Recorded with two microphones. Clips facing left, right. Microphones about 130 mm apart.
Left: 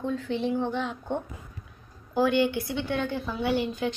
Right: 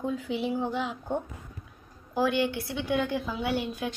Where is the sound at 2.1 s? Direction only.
Centre (ahead or behind).